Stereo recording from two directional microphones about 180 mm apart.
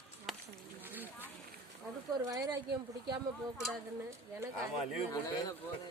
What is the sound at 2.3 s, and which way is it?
Speech, 20° right (ahead or behind).